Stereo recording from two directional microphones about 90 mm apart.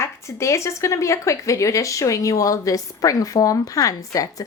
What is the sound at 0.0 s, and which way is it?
Speech, 35° left (ahead or behind).